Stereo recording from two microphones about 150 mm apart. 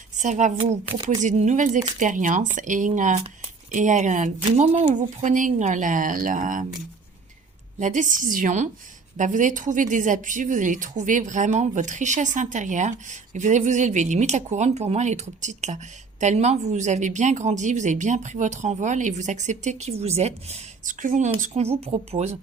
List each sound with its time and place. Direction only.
0.2 s speech: 55° right (ahead or behind)
0.9 s speech: 35° right (ahead or behind)
1.2 s a woman's voice: 55° right (ahead or behind)
4.7 s speech: 40° right (ahead or behind)
4.9 s a woman's voice: 55° right (ahead or behind)
7.8 s a woman's voice: 55° right (ahead or behind)
21.4 s speech: 45° right (ahead or behind)